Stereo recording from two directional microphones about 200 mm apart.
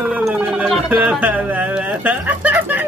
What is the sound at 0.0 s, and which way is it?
Gargling, 5° right (ahead or behind).